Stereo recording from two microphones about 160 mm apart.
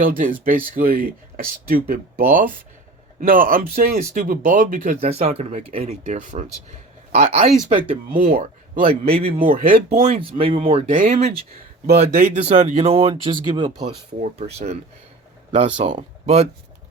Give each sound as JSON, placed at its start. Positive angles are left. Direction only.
{"t": 0.0, "sound": "speech", "side_deg": -60}
{"t": 4.9, "sound": "speech", "side_deg": -40}
{"t": 5.7, "sound": "speech", "side_deg": -60}
{"t": 8.1, "sound": "speech", "side_deg": -55}
{"t": 8.9, "sound": "speech", "side_deg": -35}
{"t": 9.4, "sound": "speech", "side_deg": -60}
{"t": 10.1, "sound": "speech", "side_deg": -35}
{"t": 10.9, "sound": "speech", "side_deg": -50}
{"t": 11.9, "sound": "speech", "side_deg": -70}
{"t": 12.3, "sound": "speech", "side_deg": -45}
{"t": 14.2, "sound": "speech", "side_deg": -45}